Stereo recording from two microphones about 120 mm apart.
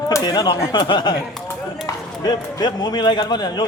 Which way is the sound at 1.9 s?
25° left (ahead or behind).